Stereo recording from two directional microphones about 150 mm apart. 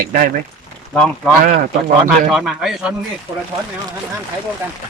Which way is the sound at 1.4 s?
60° right (ahead or behind).